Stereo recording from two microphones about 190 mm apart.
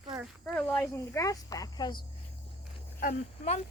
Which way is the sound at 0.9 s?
15° left (ahead or behind).